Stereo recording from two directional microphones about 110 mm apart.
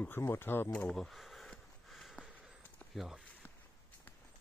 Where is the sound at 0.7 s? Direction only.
10° left (ahead or behind).